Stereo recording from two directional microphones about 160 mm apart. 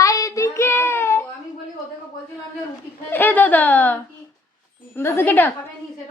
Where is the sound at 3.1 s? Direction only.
10° left (ahead or behind).